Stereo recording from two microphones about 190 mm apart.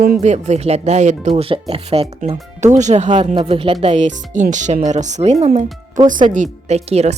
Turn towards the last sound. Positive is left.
turn(degrees=-35)  # may be behind; listen again after turning